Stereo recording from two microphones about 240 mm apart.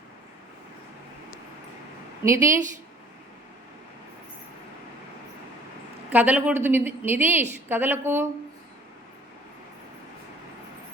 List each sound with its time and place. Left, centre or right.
2.2 s a woman's voice: centre
6.1 s a woman's voice: centre